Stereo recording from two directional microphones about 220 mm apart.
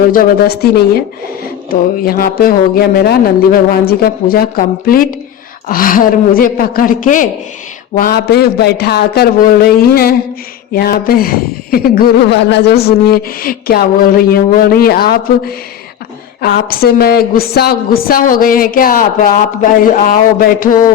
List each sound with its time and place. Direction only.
0.1 s a woman's voice: 45° left (ahead or behind)